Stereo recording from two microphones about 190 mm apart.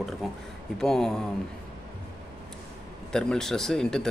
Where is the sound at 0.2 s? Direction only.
Centre (ahead or behind).